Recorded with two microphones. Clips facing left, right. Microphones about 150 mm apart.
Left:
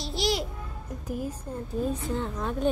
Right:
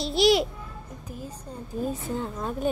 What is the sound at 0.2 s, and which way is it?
Babbling, 70° right (ahead or behind).